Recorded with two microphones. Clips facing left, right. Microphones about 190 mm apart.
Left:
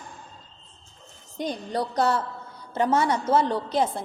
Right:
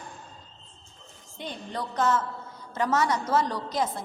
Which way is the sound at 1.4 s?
35° left (ahead or behind).